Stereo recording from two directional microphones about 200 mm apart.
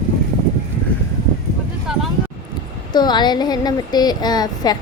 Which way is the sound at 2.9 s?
20° left (ahead or behind).